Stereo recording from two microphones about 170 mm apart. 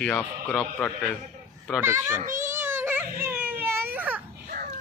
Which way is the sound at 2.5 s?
15° right (ahead or behind).